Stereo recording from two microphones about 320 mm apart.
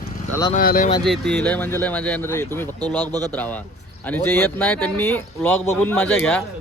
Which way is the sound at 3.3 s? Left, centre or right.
Centre.